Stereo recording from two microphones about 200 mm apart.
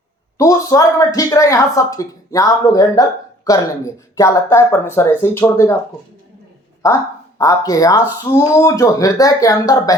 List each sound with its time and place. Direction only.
0.3 s a woman's voice: 15° left (ahead or behind)
6.8 s a woman's voice: 15° left (ahead or behind)